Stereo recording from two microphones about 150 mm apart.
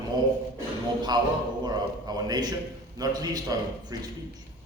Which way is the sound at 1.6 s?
25° right (ahead or behind).